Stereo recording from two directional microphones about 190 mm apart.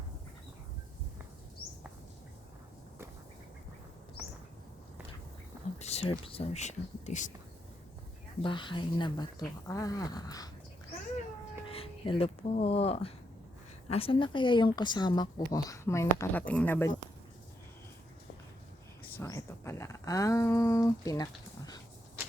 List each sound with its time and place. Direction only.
5.8 s speech: 35° left (ahead or behind)
8.4 s speech: 25° left (ahead or behind)
11.7 s music: 30° left (ahead or behind)
12.5 s speech: 30° left (ahead or behind); by 16.9 s 10° left (ahead or behind)
19.2 s speech: 15° left (ahead or behind)